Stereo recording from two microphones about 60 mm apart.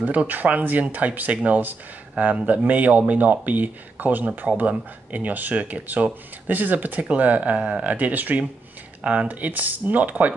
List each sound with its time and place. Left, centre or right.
0.0 s speech: right